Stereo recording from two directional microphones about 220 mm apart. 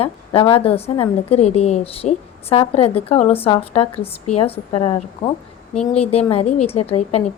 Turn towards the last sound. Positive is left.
turn(degrees=30)  # may be behind; listen again after turning